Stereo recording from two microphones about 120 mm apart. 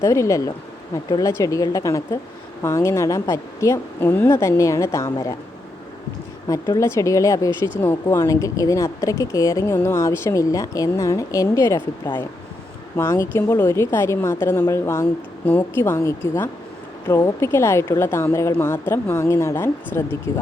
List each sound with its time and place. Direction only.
0.0 s a woman's voice: 25° left (ahead or behind)
6.5 s a woman's voice: 25° left (ahead or behind)
15.4 s a woman's voice: 15° left (ahead or behind)
15.8 s a woman's voice: 25° left (ahead or behind)